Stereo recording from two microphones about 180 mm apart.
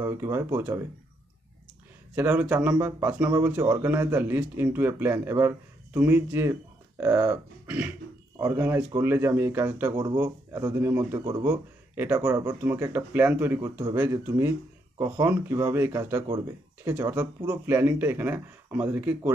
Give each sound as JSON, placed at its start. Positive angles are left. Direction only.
{"t": 0.0, "sound": "speech", "side_deg": -15}
{"t": 2.1, "sound": "speech", "side_deg": -10}